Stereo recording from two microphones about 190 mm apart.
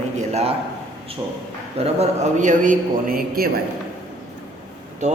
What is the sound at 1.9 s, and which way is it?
A man's voice, 40° right (ahead or behind).